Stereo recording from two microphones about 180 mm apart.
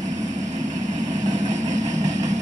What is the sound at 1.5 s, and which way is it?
Vehicle, 40° right (ahead or behind).